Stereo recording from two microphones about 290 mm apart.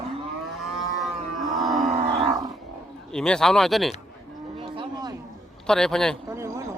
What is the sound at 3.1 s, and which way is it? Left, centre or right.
Speech, centre.